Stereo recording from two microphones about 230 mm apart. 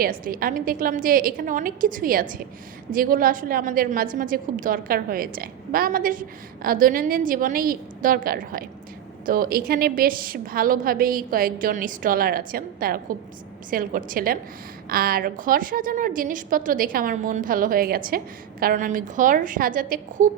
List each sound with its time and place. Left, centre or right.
0.0 s a woman's voice: right